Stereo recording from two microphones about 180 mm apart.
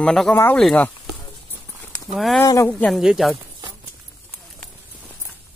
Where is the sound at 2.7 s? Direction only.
Centre (ahead or behind).